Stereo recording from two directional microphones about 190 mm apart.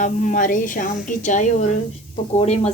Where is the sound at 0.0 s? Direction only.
45° left (ahead or behind).